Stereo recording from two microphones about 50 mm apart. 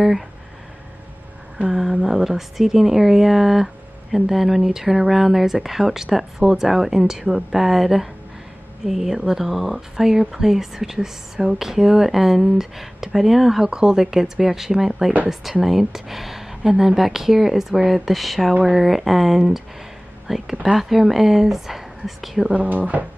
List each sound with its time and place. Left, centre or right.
1.7 s speech: centre
18.5 s speech: right
18.8 s speech: centre
22.5 s speech: right